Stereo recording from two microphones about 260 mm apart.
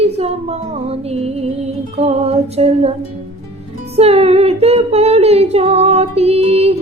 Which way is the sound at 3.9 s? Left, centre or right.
Right.